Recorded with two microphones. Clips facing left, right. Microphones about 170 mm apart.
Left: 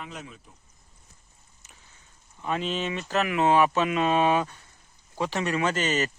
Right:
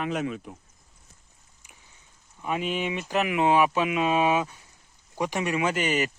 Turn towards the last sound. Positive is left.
turn(degrees=-10)  # may be behind; listen again after turning